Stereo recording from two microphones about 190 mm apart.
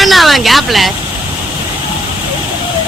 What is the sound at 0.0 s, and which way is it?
Vehicle, centre (ahead or behind).